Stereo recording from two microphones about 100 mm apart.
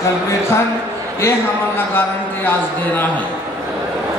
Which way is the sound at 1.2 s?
25° left (ahead or behind).